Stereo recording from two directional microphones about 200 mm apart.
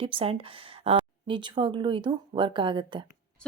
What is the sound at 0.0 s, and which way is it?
Speech, 25° right (ahead or behind).